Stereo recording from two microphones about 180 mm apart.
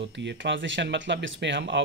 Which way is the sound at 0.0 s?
80° right.